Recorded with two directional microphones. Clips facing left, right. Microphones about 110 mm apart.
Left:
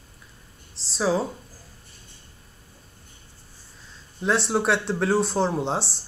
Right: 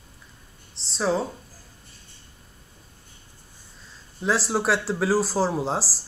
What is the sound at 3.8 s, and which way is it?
Speech, centre (ahead or behind).